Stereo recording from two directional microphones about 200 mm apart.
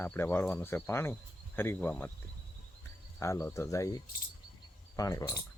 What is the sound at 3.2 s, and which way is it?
Speech, 15° left (ahead or behind).